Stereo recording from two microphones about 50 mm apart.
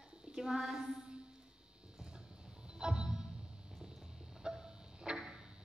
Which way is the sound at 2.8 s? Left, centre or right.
Centre.